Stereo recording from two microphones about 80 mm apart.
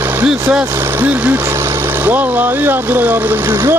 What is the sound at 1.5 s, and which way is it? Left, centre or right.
Speech, right.